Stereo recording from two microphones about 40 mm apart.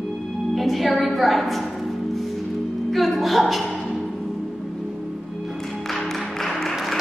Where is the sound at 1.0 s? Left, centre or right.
Centre.